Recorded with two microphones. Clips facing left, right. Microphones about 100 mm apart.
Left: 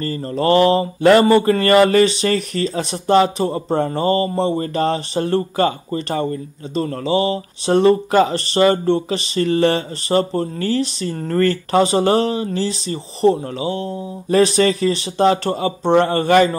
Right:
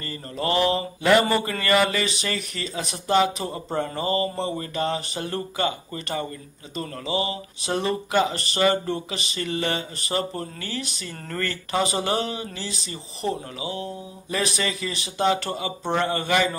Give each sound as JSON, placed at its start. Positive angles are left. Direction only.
{"t": 0.0, "sound": "speech", "side_deg": 40}